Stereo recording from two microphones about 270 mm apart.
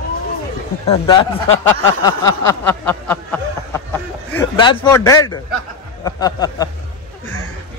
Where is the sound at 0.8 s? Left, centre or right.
Centre.